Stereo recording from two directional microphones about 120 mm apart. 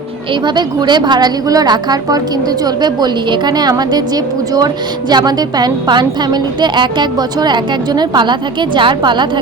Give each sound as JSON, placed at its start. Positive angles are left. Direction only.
{"t": 0.4, "sound": "a woman's voice", "side_deg": -40}